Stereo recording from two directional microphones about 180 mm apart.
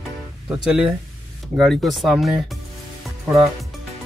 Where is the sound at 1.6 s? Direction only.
Centre (ahead or behind).